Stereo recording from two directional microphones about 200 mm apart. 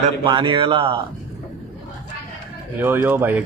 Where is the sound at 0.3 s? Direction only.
25° right (ahead or behind).